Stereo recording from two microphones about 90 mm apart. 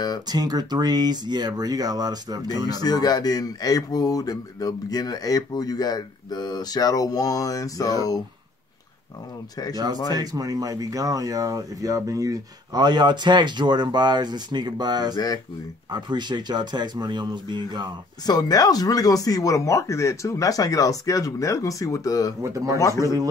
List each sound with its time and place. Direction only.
0.3 s speech: 45° right (ahead or behind)
2.7 s speech: 45° left (ahead or behind)
10.1 s speech: 45° right (ahead or behind)
12.7 s speech: 55° right (ahead or behind)
15.1 s speech: 50° left (ahead or behind)
15.9 s speech: 55° right (ahead or behind)
18.2 s speech: 45° left (ahead or behind)
22.4 s speech: 35° right (ahead or behind)
22.8 s speech: 35° left (ahead or behind)